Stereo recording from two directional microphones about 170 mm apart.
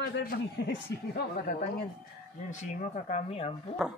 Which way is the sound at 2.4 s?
45° left (ahead or behind).